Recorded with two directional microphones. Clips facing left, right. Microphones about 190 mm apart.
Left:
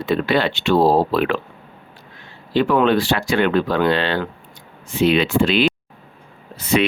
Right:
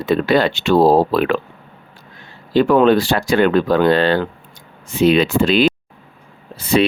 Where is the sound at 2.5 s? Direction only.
40° right (ahead or behind).